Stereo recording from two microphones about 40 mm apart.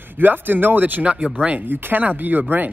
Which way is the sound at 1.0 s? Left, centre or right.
Right.